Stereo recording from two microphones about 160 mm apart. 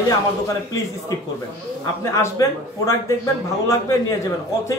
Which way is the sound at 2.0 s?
20° left (ahead or behind).